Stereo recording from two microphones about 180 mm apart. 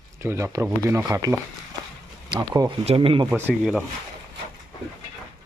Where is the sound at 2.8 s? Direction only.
30° right (ahead or behind).